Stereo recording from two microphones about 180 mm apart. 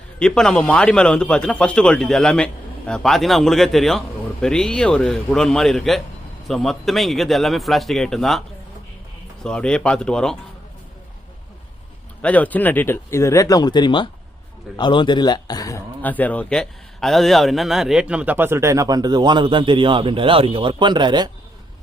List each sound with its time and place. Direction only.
0.2 s a man's voice: 5° left (ahead or behind)
12.2 s a man's voice: 10° left (ahead or behind)
16.0 s a man's voice: 10° left (ahead or behind); by 21.2 s 25° right (ahead or behind)